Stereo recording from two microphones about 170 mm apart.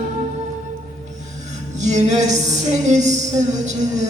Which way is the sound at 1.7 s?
45° right (ahead or behind).